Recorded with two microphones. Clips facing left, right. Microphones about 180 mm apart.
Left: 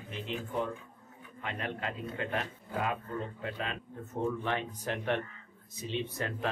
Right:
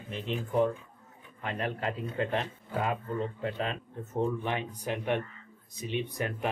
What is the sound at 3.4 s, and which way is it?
Speech, 35° right (ahead or behind).